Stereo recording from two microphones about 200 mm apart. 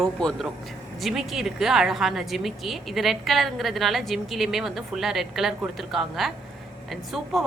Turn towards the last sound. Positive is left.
turn(degrees=0)  # may be behind; listen again after turning